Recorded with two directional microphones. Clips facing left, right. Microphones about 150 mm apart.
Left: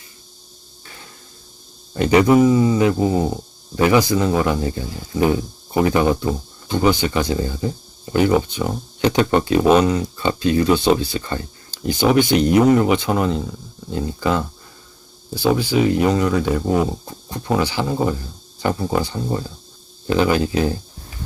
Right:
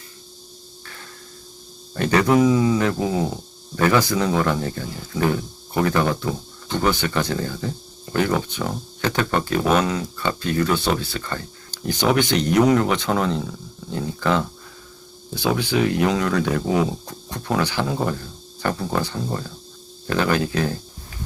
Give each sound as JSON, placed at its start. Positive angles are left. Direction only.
{"t": 2.0, "sound": "speech", "side_deg": 15}
{"t": 3.8, "sound": "speech", "side_deg": 15}